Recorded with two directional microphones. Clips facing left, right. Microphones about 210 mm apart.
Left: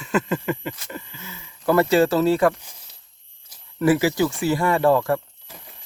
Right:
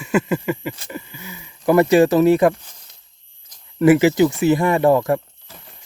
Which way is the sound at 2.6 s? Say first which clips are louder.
Left 1 dB; 10° left (ahead or behind).